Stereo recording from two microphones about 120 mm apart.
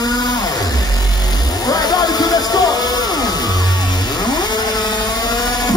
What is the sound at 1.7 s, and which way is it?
Music, 35° left (ahead or behind).